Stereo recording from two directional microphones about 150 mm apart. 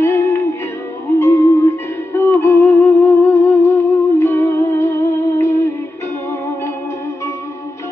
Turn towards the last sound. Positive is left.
turn(degrees=15)  # may be behind; listen again after turning